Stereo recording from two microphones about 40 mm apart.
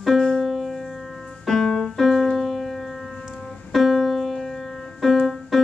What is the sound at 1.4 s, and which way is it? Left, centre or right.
Piano, centre.